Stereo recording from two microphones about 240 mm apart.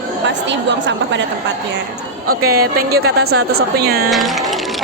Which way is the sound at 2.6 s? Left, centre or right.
Right.